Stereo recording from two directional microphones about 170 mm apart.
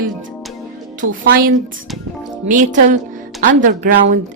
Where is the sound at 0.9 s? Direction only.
55° right (ahead or behind).